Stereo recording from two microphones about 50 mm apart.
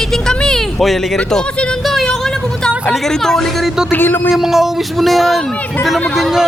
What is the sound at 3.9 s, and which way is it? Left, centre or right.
Speech, left.